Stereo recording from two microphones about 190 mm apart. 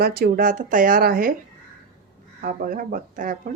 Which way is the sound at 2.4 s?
50° right (ahead or behind).